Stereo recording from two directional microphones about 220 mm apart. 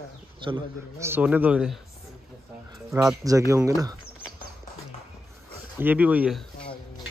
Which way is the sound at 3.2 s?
15° right (ahead or behind).